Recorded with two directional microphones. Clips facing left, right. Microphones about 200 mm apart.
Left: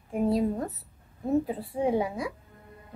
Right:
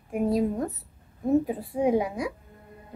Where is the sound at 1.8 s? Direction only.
15° right (ahead or behind).